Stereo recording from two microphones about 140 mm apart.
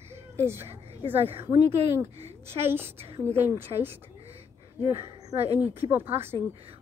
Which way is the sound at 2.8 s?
45° right (ahead or behind).